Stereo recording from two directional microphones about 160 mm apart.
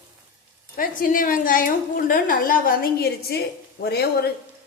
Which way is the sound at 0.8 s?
60° left (ahead or behind).